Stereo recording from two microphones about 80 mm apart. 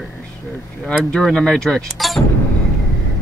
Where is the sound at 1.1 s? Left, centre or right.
Centre.